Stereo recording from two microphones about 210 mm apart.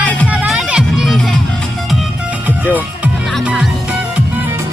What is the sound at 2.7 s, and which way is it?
Music, 5° right (ahead or behind).